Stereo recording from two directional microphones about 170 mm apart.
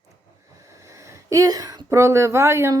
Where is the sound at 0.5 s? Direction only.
20° right (ahead or behind).